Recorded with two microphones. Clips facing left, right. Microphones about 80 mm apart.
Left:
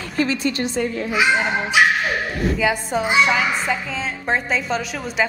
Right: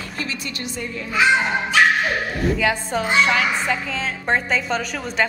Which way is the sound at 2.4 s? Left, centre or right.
Centre.